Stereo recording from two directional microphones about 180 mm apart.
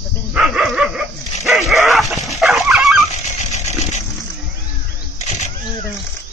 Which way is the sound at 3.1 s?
40° left (ahead or behind).